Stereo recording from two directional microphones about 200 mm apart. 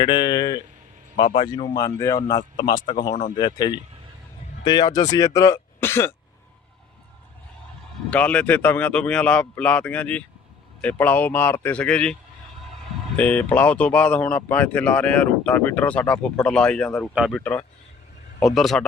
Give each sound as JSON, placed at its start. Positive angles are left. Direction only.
{"t": 0.0, "sound": "speech", "side_deg": 20}
{"t": 8.1, "sound": "speech", "side_deg": 5}
{"t": 13.1, "sound": "speech", "side_deg": 5}